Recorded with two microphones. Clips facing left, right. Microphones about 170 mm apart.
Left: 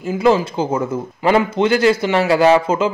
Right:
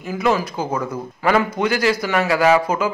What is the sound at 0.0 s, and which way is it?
A man's voice, 30° left (ahead or behind).